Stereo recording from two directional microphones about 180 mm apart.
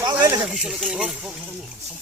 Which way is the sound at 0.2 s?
15° right (ahead or behind).